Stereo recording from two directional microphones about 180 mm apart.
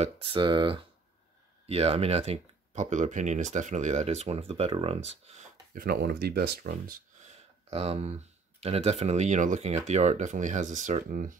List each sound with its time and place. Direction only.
0.0 s speech: 30° right (ahead or behind)
5.8 s speech: 60° right (ahead or behind)